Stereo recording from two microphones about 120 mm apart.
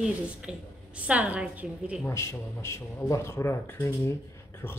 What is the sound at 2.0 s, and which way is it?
Speech, 25° left (ahead or behind).